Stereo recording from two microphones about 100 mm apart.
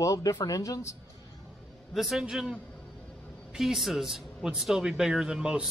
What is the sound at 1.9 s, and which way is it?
Speech, 5° right (ahead or behind).